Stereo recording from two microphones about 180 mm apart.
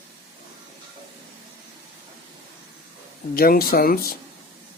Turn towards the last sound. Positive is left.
turn(degrees=55)  # may be behind; listen again after turning